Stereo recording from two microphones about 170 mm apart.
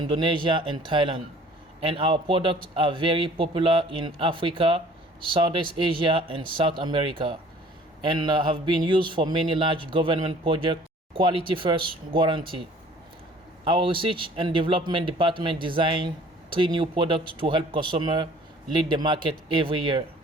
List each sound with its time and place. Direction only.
0.0 s a man's voice: 30° right (ahead or behind)
13.7 s speech: 30° right (ahead or behind)